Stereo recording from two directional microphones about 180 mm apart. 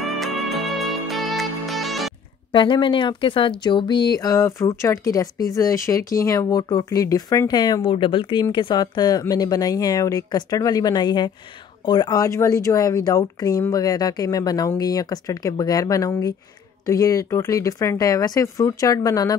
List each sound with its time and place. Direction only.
0.0 s music: centre (ahead or behind)
2.5 s speech: 25° left (ahead or behind)